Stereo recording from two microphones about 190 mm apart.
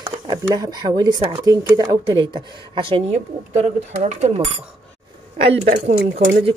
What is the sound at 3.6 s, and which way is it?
Speech, 40° right (ahead or behind).